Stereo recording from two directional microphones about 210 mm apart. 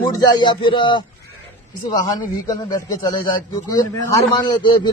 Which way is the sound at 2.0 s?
20° left (ahead or behind).